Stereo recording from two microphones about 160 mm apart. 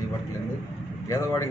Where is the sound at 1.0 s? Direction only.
20° left (ahead or behind).